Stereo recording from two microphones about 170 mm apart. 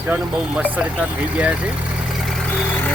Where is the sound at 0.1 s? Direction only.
Centre (ahead or behind).